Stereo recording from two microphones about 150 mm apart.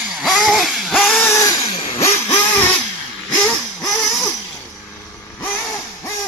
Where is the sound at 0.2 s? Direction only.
Centre (ahead or behind).